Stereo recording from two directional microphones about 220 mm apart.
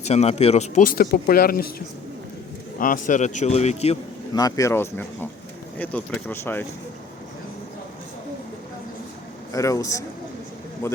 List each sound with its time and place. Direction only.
0.0 s speech: 30° left (ahead or behind)
2.7 s speech: 40° left (ahead or behind)
4.4 s speech: 15° left (ahead or behind)
9.5 s speech: 15° left (ahead or behind)